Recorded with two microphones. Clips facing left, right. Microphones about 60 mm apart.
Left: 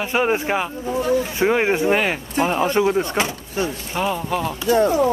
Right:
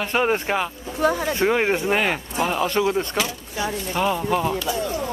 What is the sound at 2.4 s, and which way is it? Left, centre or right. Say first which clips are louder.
Speech: left 3 dB; centre.